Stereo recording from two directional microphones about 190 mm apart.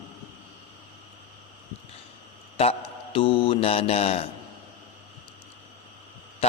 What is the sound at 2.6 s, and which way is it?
Mantra, 30° left (ahead or behind).